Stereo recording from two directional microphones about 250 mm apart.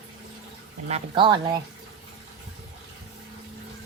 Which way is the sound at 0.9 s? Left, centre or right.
Centre.